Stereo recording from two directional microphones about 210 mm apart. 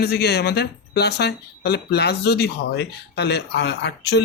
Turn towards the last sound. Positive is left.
turn(degrees=55)  # may be behind; listen again after turning